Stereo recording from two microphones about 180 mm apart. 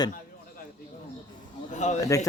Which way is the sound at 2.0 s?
20° left (ahead or behind).